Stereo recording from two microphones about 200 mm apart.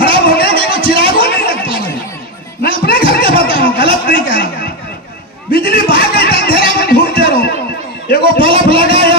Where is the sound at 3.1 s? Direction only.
45° left (ahead or behind).